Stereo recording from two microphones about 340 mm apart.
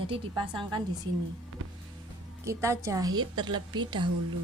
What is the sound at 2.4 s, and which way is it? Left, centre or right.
A woman's voice, centre.